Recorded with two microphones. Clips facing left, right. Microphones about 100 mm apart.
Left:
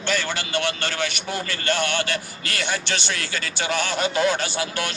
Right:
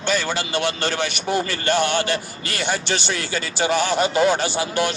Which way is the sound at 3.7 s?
5° right (ahead or behind).